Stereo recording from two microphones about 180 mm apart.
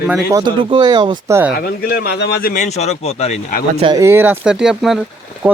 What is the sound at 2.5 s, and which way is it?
Speech, 40° left (ahead or behind).